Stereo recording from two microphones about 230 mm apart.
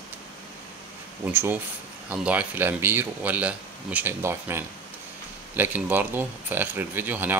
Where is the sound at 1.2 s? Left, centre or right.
Centre.